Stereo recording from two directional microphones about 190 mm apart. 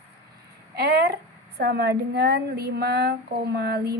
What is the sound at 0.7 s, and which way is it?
A woman's voice, 55° right (ahead or behind).